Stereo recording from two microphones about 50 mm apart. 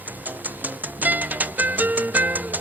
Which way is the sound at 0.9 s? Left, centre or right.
Right.